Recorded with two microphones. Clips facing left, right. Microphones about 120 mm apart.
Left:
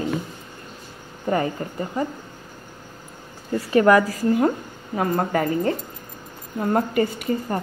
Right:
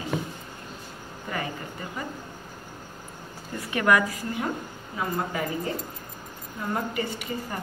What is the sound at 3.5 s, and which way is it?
A woman's voice, 35° left (ahead or behind).